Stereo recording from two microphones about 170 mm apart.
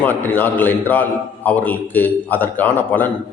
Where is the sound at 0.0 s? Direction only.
10° left (ahead or behind).